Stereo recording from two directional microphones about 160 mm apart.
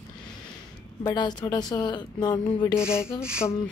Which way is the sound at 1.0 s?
25° left (ahead or behind).